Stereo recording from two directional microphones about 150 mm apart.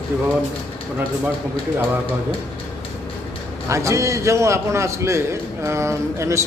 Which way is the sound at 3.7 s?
20° right (ahead or behind).